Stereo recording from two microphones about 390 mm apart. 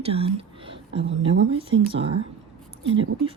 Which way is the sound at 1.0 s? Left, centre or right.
Right.